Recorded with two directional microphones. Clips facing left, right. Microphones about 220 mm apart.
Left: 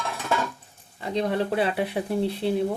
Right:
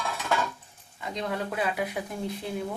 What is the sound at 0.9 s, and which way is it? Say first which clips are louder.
Speech: left 7 dB; 35° left (ahead or behind).